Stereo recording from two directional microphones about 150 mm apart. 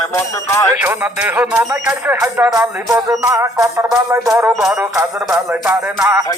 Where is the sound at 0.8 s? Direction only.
15° right (ahead or behind).